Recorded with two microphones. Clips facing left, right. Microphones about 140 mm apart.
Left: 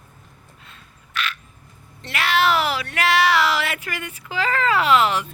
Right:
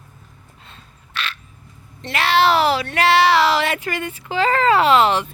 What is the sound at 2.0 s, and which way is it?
Speech, 30° right (ahead or behind).